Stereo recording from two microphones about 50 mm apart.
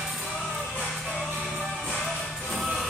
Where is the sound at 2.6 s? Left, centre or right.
Centre.